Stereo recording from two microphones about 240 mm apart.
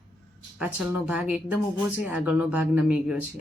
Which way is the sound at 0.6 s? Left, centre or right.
Centre.